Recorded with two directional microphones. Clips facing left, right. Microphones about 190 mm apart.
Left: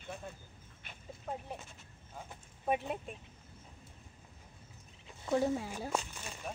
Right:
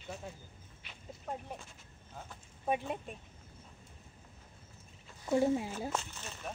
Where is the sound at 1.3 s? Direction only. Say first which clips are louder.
Even; centre (ahead or behind).